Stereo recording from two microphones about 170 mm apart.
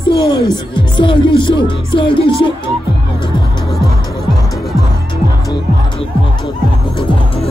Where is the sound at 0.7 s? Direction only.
30° left (ahead or behind).